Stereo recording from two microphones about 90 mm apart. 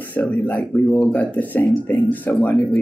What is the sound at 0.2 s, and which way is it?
Speech, 15° left (ahead or behind).